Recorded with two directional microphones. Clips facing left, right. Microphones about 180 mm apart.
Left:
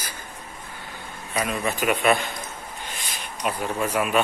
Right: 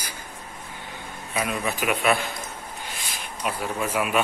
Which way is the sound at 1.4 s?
5° right (ahead or behind).